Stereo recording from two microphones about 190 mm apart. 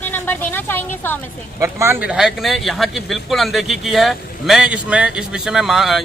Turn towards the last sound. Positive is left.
turn(degrees=0)  # may be behind; listen again after turning